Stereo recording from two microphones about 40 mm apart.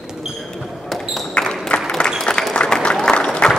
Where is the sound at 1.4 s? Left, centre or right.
Left.